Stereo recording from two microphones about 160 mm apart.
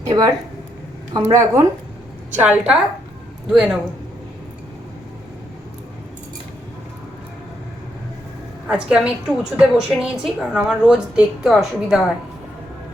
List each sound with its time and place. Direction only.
0.0 s speech: 20° right (ahead or behind)
2.4 s a woman's voice: 10° right (ahead or behind)
8.6 s a woman's voice: 5° right (ahead or behind)